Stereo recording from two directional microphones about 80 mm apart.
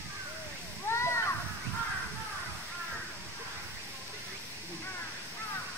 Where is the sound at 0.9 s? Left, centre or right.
Left.